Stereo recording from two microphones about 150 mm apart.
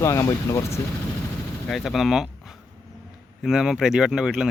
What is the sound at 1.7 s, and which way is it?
Speech, centre (ahead or behind).